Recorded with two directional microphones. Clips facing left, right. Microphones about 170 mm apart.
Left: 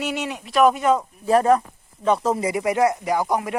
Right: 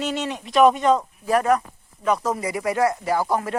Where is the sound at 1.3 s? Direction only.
30° left (ahead or behind).